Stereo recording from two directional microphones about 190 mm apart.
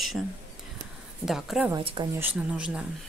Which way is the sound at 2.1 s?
10° right (ahead or behind).